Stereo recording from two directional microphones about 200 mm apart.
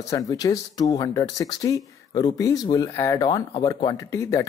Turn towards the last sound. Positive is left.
turn(degrees=15)  # may be behind; listen again after turning